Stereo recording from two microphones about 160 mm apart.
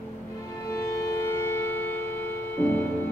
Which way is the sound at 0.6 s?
15° left (ahead or behind).